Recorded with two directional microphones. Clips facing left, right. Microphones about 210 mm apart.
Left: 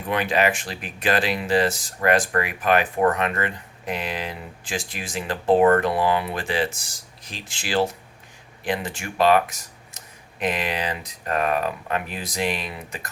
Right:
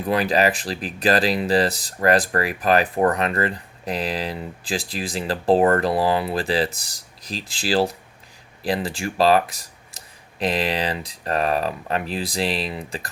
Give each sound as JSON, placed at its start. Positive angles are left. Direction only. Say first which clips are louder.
{"t": 0.1, "sound": "speech", "louder": "right 2 dB", "side_deg": -35}